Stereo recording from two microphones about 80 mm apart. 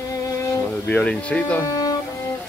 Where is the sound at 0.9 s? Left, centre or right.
Centre.